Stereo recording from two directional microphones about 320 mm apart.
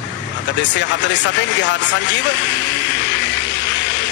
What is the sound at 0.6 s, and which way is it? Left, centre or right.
Speech, left.